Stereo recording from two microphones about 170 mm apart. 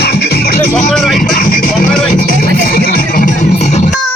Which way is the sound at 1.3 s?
55° left (ahead or behind).